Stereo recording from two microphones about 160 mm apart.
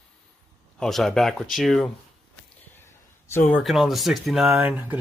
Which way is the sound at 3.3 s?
10° left (ahead or behind).